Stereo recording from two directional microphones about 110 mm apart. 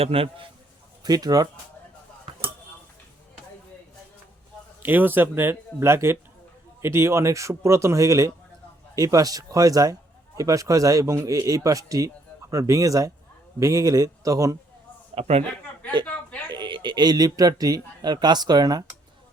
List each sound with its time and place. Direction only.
0.0 s a man's voice: 60° right (ahead or behind)
1.0 s a man's voice: 35° right (ahead or behind)
4.8 s a man's voice: 15° right (ahead or behind)
15.1 s a man's voice: 70° right (ahead or behind)
16.5 s speech: 45° right (ahead or behind)